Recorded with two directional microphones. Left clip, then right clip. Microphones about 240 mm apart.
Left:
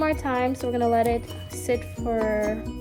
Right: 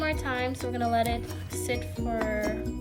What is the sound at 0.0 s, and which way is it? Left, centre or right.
Speech, centre.